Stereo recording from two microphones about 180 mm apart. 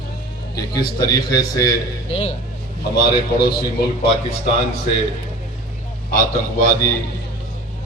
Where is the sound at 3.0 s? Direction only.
60° left (ahead or behind).